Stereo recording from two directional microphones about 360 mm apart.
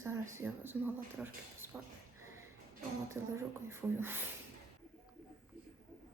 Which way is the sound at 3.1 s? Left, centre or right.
Centre.